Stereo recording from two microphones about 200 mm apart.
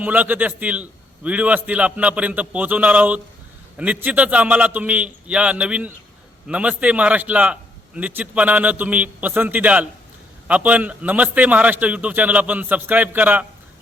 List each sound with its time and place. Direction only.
0.0 s a man's voice: 10° right (ahead or behind)